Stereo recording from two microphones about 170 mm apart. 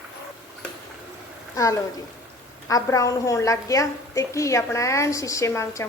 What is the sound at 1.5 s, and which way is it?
A woman's voice, 20° left (ahead or behind).